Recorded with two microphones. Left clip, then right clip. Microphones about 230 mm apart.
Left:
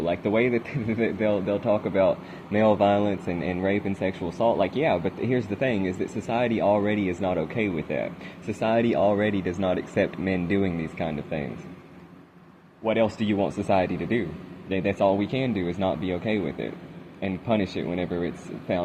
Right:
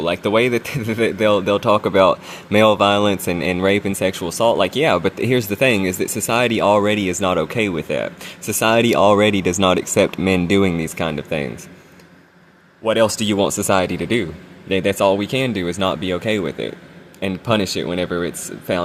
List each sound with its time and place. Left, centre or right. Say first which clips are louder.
0.0 s speech: right 7 dB; right
12.8 s speech: right 8 dB; right